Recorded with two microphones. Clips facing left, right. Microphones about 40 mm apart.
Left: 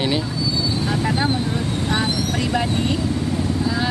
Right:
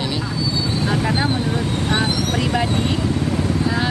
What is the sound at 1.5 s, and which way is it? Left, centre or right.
Speech, right.